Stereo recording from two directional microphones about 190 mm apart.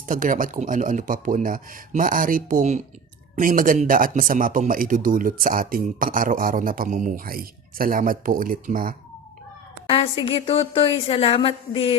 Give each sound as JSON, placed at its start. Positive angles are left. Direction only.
{"t": 0.1, "sound": "speech", "side_deg": -45}
{"t": 9.9, "sound": "a woman's voice", "side_deg": 30}